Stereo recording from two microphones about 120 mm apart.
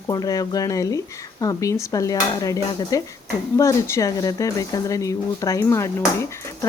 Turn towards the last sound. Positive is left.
turn(degrees=25)  # may be behind; listen again after turning